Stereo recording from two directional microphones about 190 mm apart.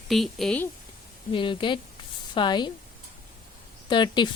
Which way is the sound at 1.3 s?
25° left (ahead or behind).